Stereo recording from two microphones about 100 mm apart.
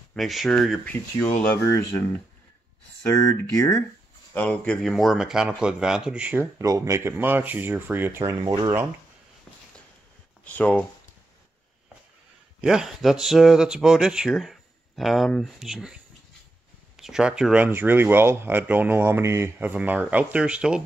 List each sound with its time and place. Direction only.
0.1 s speech: centre (ahead or behind)
0.9 s speech: 15° left (ahead or behind)
3.1 s speech: 30° left (ahead or behind)
4.3 s speech: 15° left (ahead or behind)
4.9 s speech: 5° right (ahead or behind)
6.6 s speech: 30° right (ahead or behind)
10.4 s speech: 15° left (ahead or behind)
12.6 s speech: 5° right (ahead or behind)
17.0 s speech: 5° right (ahead or behind)
17.6 s speech: 20° right (ahead or behind)
19.7 s speech: 15° right (ahead or behind)